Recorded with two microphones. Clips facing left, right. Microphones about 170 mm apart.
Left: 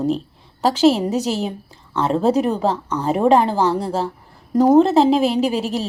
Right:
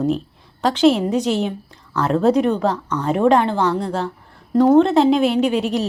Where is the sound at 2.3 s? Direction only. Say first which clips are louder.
Right 1 dB; 35° left (ahead or behind).